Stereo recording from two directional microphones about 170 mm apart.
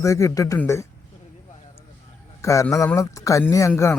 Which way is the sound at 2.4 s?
20° left (ahead or behind).